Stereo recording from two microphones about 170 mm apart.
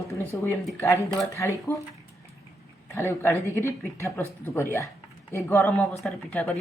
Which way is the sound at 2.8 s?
15° left (ahead or behind).